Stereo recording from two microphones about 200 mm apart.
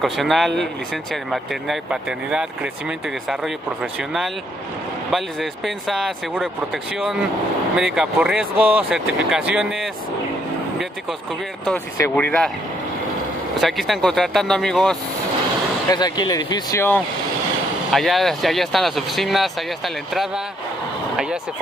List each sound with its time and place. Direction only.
0.0 s speech: centre (ahead or behind)
12.0 s speech: 10° left (ahead or behind)
13.6 s speech: centre (ahead or behind)
15.9 s speech: 20° left (ahead or behind)
17.9 s speech: centre (ahead or behind)